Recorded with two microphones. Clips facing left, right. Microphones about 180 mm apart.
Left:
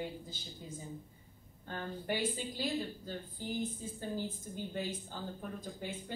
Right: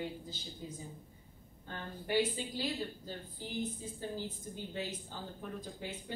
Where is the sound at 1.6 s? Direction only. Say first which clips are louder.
Left 3 dB; 50° left (ahead or behind).